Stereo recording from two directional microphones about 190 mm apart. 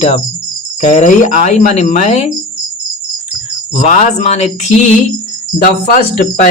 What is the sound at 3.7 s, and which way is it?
Speech, 35° left (ahead or behind).